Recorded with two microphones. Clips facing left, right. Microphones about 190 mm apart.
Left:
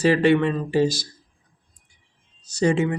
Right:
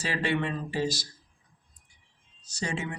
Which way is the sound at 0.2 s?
70° left (ahead or behind).